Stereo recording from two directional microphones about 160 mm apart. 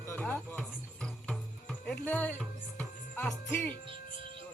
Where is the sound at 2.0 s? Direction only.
10° left (ahead or behind).